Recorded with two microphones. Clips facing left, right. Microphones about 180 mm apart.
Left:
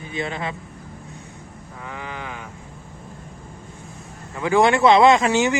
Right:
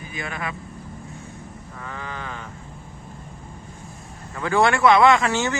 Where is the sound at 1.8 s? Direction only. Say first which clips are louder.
Left 1 dB; 15° left (ahead or behind).